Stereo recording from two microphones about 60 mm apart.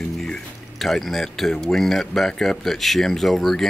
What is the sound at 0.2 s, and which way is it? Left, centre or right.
Speech, centre.